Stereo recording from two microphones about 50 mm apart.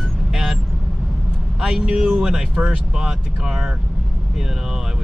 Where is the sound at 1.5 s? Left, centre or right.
Centre.